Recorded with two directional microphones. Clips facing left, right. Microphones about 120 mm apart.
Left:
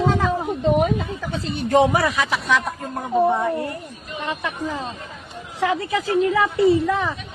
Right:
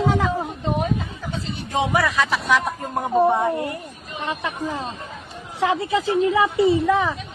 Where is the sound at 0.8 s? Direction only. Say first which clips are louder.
Left 4 dB; 90° left.